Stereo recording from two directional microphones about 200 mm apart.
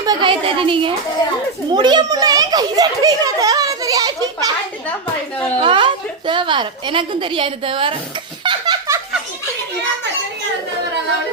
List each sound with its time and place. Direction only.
0.0 s a child's voice: 20° right (ahead or behind)
5.5 s a woman's voice: 25° right (ahead or behind)
8.4 s laughter: 20° right (ahead or behind)